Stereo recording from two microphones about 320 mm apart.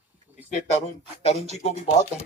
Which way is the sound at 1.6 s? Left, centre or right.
Left.